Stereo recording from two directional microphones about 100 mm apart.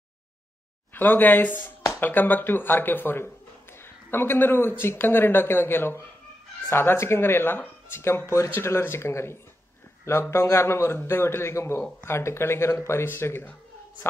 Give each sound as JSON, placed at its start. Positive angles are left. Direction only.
{"t": 0.9, "sound": "speech", "side_deg": 20}